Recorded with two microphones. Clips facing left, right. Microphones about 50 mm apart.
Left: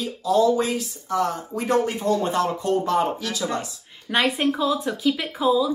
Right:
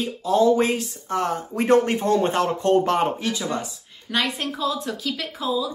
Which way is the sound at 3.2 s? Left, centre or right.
Right.